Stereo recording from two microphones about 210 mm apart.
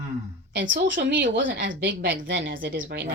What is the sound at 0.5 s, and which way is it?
Speech, 60° right (ahead or behind).